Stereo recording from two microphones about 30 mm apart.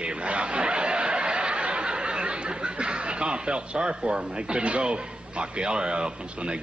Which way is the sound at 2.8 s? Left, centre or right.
Right.